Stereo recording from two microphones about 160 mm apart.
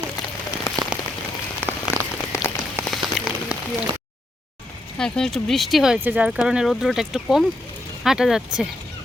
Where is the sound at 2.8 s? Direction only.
Centre (ahead or behind).